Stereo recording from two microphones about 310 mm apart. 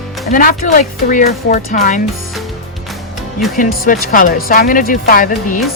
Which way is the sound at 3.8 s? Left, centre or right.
Left.